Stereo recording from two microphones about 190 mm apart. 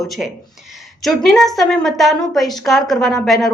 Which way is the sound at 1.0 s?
Centre (ahead or behind).